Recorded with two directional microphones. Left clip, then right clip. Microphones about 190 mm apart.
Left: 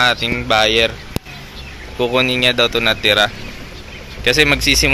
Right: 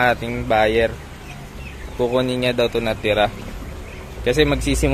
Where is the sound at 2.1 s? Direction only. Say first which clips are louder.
Left 6 dB; 5° right (ahead or behind).